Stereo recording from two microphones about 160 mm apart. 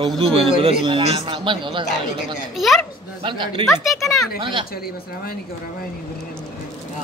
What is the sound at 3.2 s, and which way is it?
Speech, 30° right (ahead or behind).